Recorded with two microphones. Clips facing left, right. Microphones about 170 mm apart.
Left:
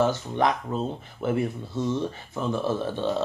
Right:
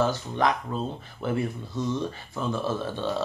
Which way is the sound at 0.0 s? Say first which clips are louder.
Left 2 dB; 20° left (ahead or behind).